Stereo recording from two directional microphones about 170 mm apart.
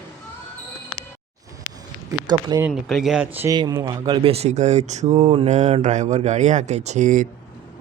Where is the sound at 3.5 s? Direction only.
20° right (ahead or behind); by 7.2 s 45° right (ahead or behind).